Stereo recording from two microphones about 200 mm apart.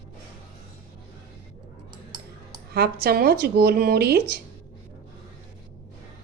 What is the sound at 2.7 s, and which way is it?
A woman's voice, 50° right (ahead or behind).